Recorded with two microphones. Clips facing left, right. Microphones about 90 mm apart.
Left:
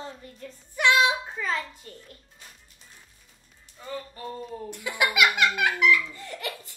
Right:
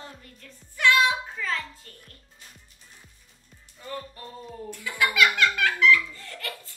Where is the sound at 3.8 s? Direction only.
Centre (ahead or behind).